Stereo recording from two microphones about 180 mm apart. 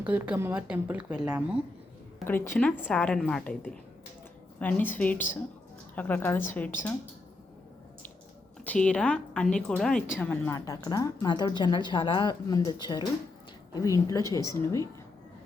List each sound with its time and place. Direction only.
0.0 s speech: 10° right (ahead or behind)
2.2 s a woman's voice: 10° left (ahead or behind)
8.6 s a woman's voice: 5° left (ahead or behind)